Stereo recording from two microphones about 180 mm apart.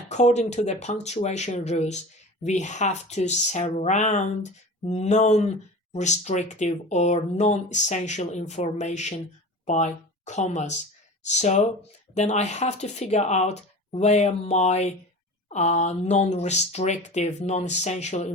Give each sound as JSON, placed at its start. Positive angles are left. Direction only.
{"t": 0.1, "sound": "speech", "side_deg": 40}